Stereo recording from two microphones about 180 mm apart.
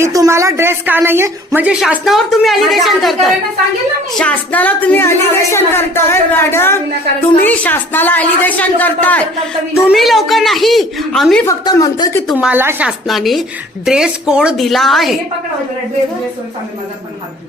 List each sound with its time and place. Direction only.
0.0 s a woman's voice: 15° right (ahead or behind); by 11.4 s centre (ahead or behind)
11.4 s speech: 20° left (ahead or behind)
12.3 s a woman's voice: 5° right (ahead or behind)